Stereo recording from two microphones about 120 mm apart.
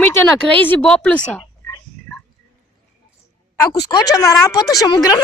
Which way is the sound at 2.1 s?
5° left (ahead or behind).